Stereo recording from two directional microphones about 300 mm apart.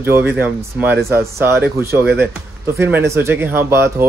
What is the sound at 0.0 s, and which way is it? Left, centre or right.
Speech, centre.